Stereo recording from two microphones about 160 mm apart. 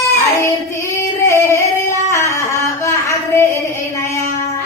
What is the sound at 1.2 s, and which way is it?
Singing, 15° left (ahead or behind).